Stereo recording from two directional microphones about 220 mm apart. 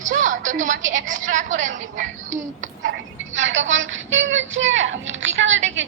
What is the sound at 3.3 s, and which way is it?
Speech, 60° right (ahead or behind).